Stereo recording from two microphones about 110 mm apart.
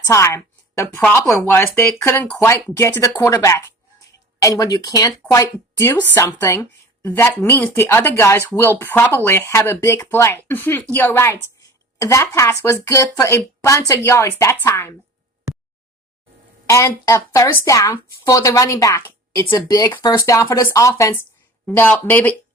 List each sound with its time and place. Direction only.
0.0 s a woman's voice: 25° left (ahead or behind)
16.6 s speech: 25° left (ahead or behind)